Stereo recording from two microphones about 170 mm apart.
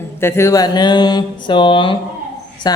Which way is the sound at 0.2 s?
15° left (ahead or behind).